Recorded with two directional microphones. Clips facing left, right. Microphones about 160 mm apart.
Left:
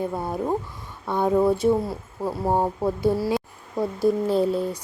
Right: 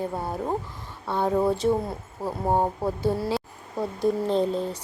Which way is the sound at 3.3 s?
10° left (ahead or behind).